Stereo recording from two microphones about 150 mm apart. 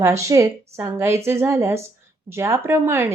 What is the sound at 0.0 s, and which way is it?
A woman's voice, 20° right (ahead or behind).